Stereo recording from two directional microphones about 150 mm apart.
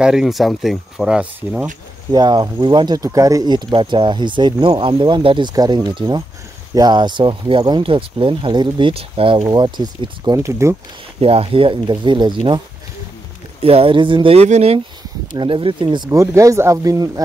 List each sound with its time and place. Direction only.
0.0 s speech: 5° right (ahead or behind)
2.0 s speech: 30° right (ahead or behind)
11.1 s speech: 40° right (ahead or behind)
15.3 s speech: 35° right (ahead or behind)
16.1 s speech: 20° right (ahead or behind)